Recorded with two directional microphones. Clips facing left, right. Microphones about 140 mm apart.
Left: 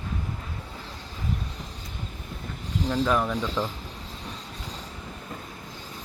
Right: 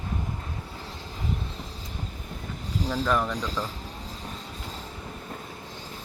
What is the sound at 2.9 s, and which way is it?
Speech, centre (ahead or behind).